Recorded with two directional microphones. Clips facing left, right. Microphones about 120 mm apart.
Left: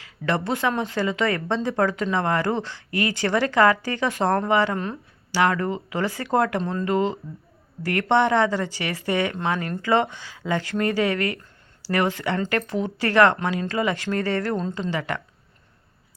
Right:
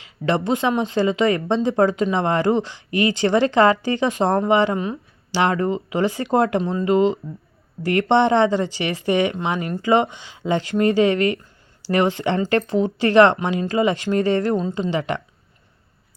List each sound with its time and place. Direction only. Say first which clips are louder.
0.0 s speech: right 4 dB; 20° right (ahead or behind)
6.6 s speech: right 5 dB; 10° right (ahead or behind)